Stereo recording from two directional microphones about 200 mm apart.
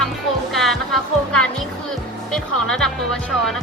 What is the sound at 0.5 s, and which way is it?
Music, centre (ahead or behind).